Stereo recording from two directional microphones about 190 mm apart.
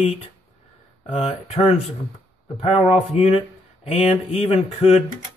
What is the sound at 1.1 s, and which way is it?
Speech, 30° left (ahead or behind).